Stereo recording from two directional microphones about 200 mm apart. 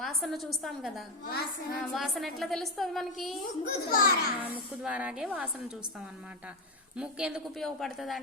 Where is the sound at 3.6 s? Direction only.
45° left (ahead or behind).